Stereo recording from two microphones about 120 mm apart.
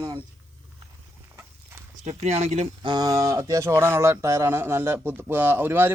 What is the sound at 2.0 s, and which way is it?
Speech, 65° right (ahead or behind).